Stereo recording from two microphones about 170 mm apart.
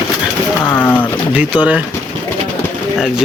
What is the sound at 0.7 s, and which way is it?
Speech, 10° left (ahead or behind).